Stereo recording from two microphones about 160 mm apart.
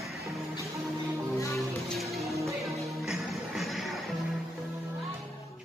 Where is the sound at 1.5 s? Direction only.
Centre (ahead or behind).